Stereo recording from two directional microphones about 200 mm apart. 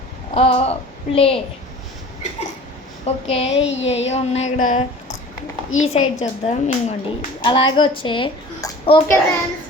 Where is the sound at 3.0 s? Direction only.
30° left (ahead or behind).